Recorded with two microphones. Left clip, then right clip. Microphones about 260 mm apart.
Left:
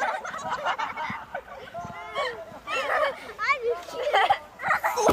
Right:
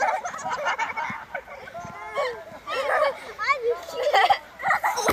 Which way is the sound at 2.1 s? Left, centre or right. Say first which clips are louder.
Right 3 dB; right.